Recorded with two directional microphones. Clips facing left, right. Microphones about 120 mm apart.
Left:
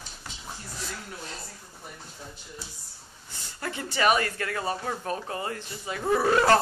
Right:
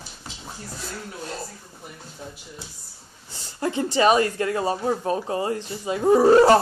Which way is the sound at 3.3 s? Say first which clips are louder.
Right 9 dB; 25° right (ahead or behind).